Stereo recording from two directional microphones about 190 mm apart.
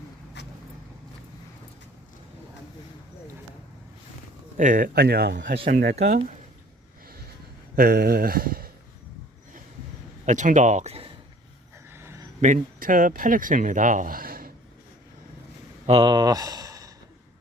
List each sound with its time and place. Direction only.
0.4 s vehicle: 65° left (ahead or behind)
4.5 s speech: 45° right (ahead or behind); by 5.5 s 60° right (ahead or behind)
5.6 s speech: 45° right (ahead or behind)
7.8 s speech: 55° right (ahead or behind)
10.2 s speech: 40° right (ahead or behind)
11.9 s a sound: 15° right (ahead or behind)
12.4 s speech: 40° right (ahead or behind)
15.9 s speech: 25° right (ahead or behind)